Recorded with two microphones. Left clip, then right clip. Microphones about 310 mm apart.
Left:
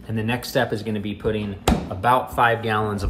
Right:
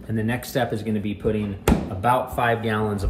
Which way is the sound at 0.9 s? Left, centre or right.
Left.